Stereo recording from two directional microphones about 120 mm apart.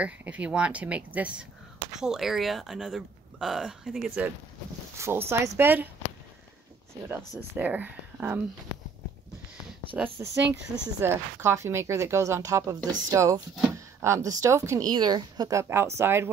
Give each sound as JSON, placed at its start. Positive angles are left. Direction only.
{"t": 0.0, "sound": "speech", "side_deg": -10}
{"t": 4.9, "sound": "speech", "side_deg": -20}
{"t": 6.9, "sound": "speech", "side_deg": -20}
{"t": 9.9, "sound": "speech", "side_deg": -15}
{"t": 13.7, "sound": "a sound", "side_deg": -25}
{"t": 14.4, "sound": "speech", "side_deg": -25}
{"t": 15.7, "sound": "speech", "side_deg": -20}